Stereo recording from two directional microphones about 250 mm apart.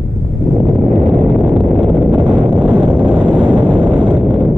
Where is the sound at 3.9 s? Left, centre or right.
Centre.